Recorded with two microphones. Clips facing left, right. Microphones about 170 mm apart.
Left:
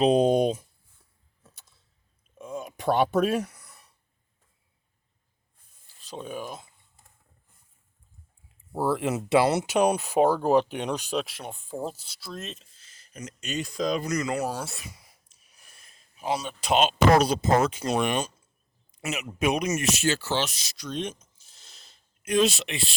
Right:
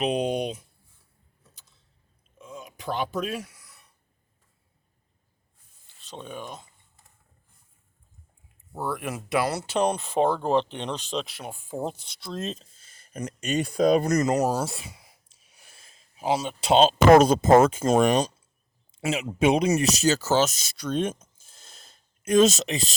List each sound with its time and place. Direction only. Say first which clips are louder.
0.0 s speech: left 6 dB; 40° left (ahead or behind)
2.4 s a sound: left 6 dB; 55° left (ahead or behind)
6.1 s speech: left 2 dB; 5° left (ahead or behind)
8.7 s speech: left 5 dB; 30° left (ahead or behind)
9.6 s speech: left 2 dB; 10° left (ahead or behind)
11.7 s speech: right 2 dB; 20° right (ahead or behind)
12.4 s speech: right 9 dB; 35° right (ahead or behind)
12.9 s speech: right 6 dB; 55° right (ahead or behind)
14.8 s speech: right 1 dB; 25° right (ahead or behind)
15.4 s a sound: right 2 dB; 30° right (ahead or behind)
17.1 s speech: right 7 dB; 45° right (ahead or behind)
18.9 s speech: right 5 dB; 30° right (ahead or behind)